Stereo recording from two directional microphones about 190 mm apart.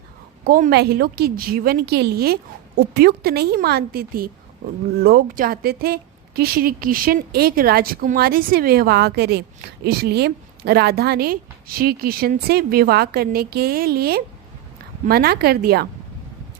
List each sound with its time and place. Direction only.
0.4 s a woman's voice: 50° right (ahead or behind)